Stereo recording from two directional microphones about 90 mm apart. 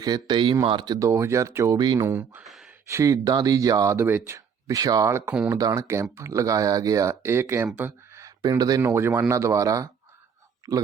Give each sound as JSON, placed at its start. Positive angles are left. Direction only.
{"t": 0.0, "sound": "a man's voice", "side_deg": -50}
{"t": 0.6, "sound": "speech", "side_deg": -60}
{"t": 0.9, "sound": "speech", "side_deg": -35}
{"t": 2.4, "sound": "speech", "side_deg": 0}
{"t": 2.9, "sound": "speech", "side_deg": -40}
{"t": 7.8, "sound": "a sound", "side_deg": -25}
{"t": 8.2, "sound": "a sound", "side_deg": -40}
{"t": 8.8, "sound": "a man's voice", "side_deg": -30}